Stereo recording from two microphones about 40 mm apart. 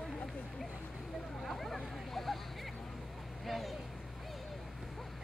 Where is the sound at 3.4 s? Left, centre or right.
Centre.